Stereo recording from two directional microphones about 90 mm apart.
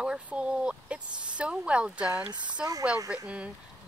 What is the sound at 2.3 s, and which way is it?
Speech, 55° right (ahead or behind).